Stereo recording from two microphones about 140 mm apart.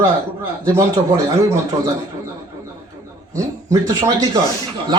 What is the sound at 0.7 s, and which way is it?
Speech, 25° right (ahead or behind).